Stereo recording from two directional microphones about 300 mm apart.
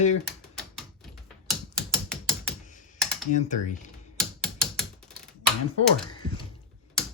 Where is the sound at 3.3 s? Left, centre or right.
Left.